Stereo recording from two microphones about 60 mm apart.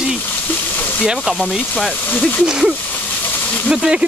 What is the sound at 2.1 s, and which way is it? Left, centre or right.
Speech, left.